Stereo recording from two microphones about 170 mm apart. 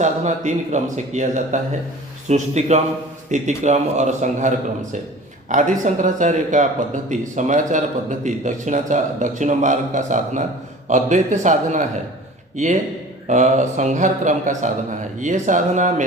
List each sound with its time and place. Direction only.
0.0 s a man's voice: 45° right (ahead or behind)
13.2 s a man's voice: 45° right (ahead or behind)